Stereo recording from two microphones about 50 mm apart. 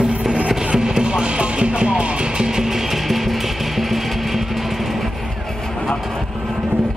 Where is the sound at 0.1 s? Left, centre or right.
Right; by 5.1 s centre.